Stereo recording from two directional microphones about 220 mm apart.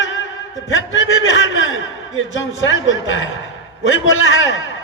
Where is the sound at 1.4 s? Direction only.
60° left (ahead or behind).